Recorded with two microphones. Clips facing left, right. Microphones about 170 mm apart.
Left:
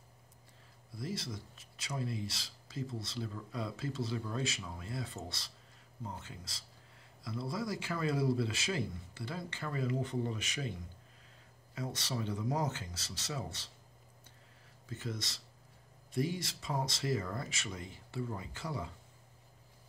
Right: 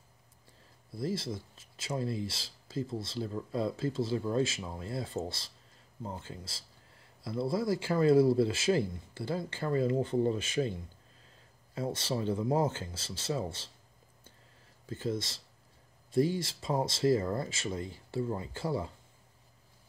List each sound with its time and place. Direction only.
0.9 s speech: 30° right (ahead or behind)
11.7 s speech: 30° right (ahead or behind)
14.9 s speech: 30° right (ahead or behind)